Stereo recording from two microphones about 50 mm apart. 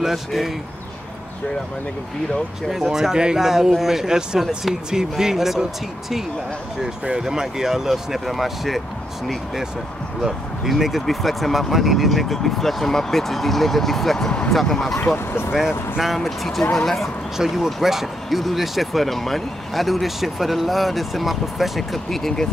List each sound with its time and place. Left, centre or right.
0.0 s speech: centre
2.7 s speech: centre
10.2 s speech: centre
15.1 s speech: left
16.2 s speech: centre